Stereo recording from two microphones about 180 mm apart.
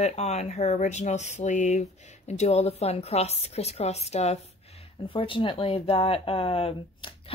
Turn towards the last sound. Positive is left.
turn(degrees=30)  # may be behind; listen again after turning